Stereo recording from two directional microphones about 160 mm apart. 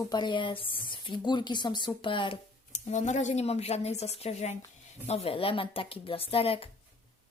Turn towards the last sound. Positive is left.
turn(degrees=35)  # may be behind; listen again after turning